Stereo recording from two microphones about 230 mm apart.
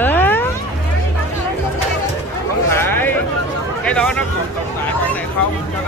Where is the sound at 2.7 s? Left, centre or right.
Centre.